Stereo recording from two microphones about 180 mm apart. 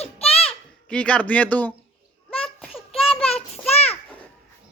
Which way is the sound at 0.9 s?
5° left (ahead or behind).